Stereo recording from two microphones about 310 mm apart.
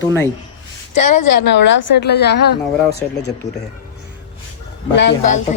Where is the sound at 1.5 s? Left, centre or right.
Left.